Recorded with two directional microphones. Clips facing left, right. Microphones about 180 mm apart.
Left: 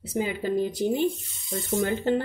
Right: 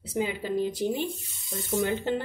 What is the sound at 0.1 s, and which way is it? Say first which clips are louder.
Speech: left 2 dB; 45° left (ahead or behind).